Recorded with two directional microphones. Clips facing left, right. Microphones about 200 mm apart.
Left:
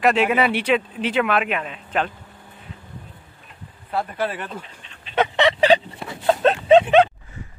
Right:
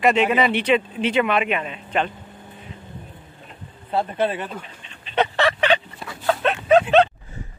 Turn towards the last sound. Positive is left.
turn(degrees=35)  # may be behind; listen again after turning